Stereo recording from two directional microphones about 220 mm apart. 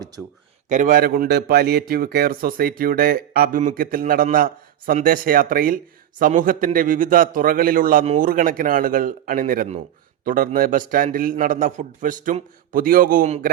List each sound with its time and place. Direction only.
0.7 s a man's voice: 35° right (ahead or behind)